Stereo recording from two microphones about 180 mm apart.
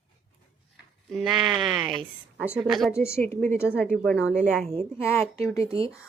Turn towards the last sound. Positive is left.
turn(degrees=15)  # may be behind; listen again after turning